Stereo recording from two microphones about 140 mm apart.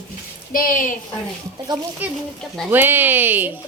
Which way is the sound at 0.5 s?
75° left (ahead or behind).